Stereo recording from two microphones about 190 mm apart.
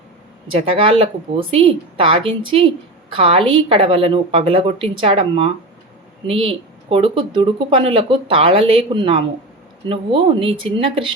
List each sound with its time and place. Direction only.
0.8 s speech: 30° right (ahead or behind)